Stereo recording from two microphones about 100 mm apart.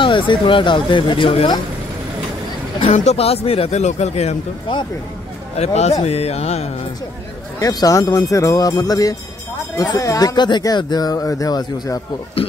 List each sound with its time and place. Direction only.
0.0 s speech: 55° left (ahead or behind)
2.8 s speech: 90° left
5.6 s speech: 90° left
7.5 s speech: 40° left (ahead or behind)